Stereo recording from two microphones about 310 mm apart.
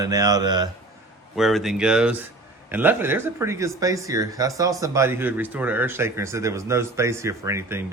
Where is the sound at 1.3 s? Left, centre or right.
Centre.